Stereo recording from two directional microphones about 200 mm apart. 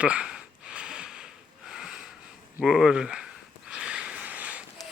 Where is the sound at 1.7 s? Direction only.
5° right (ahead or behind).